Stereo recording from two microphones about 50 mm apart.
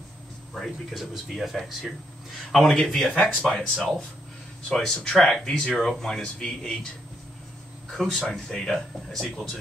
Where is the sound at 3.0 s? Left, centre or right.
Left.